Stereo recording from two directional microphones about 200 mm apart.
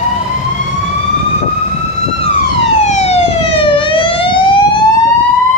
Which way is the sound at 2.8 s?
30° left (ahead or behind).